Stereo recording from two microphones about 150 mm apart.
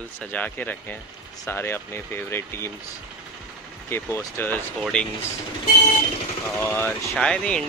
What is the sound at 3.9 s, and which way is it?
Speech, 20° left (ahead or behind).